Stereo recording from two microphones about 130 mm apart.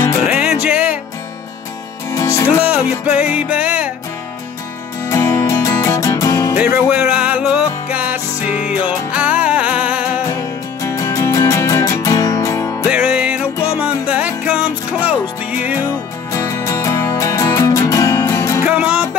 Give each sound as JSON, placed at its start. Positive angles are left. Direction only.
{"t": 0.3, "sound": "music", "side_deg": -5}
{"t": 2.0, "sound": "music", "side_deg": 25}
{"t": 2.6, "sound": "music", "side_deg": -10}
{"t": 5.0, "sound": "music", "side_deg": 20}
{"t": 6.5, "sound": "music", "side_deg": -10}
{"t": 10.8, "sound": "music", "side_deg": 20}
{"t": 12.8, "sound": "music", "side_deg": -5}
{"t": 16.3, "sound": "music", "side_deg": 20}
{"t": 18.6, "sound": "music", "side_deg": -10}